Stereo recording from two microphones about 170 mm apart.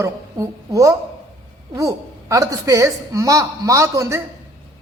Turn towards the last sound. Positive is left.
turn(degrees=-20)  # may be behind; listen again after turning